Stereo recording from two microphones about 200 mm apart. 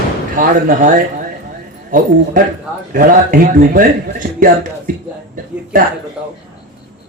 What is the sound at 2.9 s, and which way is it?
Speech, 45° right (ahead or behind).